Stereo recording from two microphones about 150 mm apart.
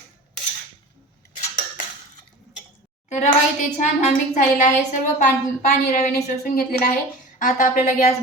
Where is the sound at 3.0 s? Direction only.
50° left (ahead or behind).